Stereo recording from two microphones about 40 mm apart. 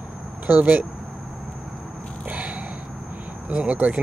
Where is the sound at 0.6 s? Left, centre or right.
Right.